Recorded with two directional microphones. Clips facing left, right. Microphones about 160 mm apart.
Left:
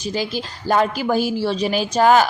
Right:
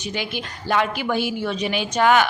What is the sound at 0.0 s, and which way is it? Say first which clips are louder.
A woman's voice: left 4 dB; 35° left (ahead or behind).